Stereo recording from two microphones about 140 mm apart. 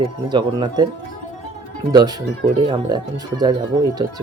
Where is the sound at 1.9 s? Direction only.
30° right (ahead or behind).